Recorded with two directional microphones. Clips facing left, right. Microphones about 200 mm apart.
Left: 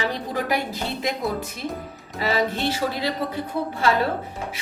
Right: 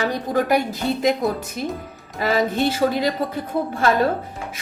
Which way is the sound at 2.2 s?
50° right (ahead or behind).